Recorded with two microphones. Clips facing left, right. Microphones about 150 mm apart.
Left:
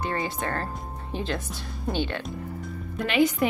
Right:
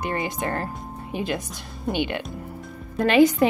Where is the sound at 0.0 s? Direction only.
15° right (ahead or behind).